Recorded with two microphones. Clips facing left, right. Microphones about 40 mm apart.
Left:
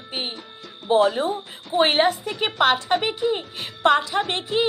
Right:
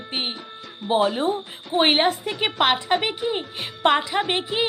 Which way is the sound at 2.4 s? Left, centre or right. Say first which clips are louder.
Left 1 dB; right.